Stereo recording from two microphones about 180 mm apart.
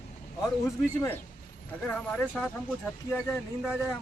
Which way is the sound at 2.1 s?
5° left (ahead or behind).